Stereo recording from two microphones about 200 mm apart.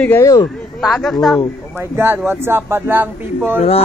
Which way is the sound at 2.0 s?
10° right (ahead or behind).